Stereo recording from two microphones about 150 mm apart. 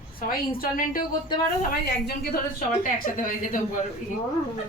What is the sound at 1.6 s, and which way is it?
Speech, 90° left.